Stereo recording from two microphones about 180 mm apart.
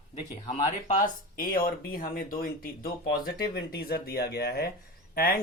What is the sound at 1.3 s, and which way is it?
Speech, 55° left (ahead or behind).